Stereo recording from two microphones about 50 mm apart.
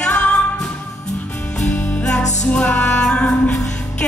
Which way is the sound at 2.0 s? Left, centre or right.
Centre.